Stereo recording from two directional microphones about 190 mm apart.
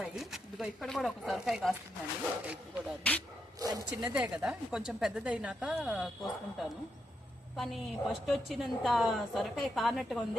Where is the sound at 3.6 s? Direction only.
20° right (ahead or behind).